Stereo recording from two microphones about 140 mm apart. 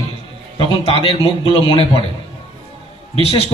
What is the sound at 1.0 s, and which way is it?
Speech, 40° left (ahead or behind).